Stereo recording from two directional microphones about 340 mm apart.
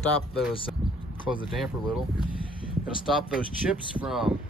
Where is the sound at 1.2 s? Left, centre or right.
Centre.